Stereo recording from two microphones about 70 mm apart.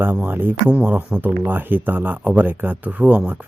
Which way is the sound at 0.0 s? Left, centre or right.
Right.